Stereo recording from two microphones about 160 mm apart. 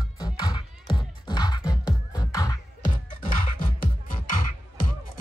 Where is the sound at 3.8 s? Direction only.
55° left (ahead or behind).